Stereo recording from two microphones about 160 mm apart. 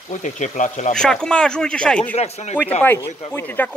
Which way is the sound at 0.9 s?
5° left (ahead or behind).